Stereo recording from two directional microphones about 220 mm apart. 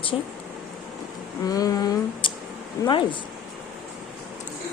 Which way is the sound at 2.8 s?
20° left (ahead or behind).